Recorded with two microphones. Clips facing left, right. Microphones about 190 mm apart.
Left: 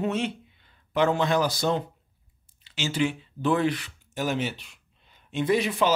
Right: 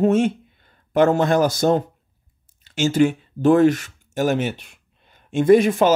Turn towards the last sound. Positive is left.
turn(degrees=-45)  # may be behind; listen again after turning